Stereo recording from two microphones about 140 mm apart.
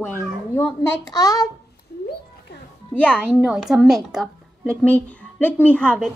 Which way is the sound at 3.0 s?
5° left (ahead or behind).